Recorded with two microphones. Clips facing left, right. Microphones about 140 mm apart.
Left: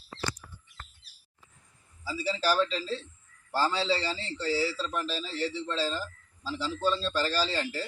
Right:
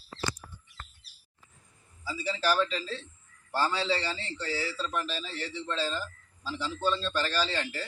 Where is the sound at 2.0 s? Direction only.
35° left (ahead or behind).